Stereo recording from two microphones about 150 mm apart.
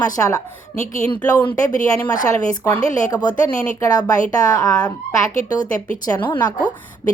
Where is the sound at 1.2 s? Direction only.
10° left (ahead or behind).